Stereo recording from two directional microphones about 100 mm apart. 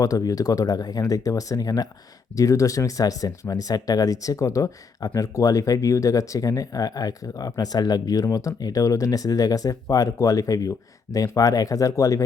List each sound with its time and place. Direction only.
0.0 s speech: 35° left (ahead or behind)